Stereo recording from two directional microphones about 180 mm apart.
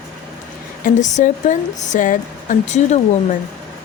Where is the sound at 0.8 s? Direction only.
40° left (ahead or behind).